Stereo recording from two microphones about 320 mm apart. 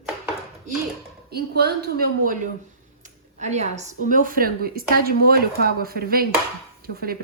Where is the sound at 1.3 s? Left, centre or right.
Right.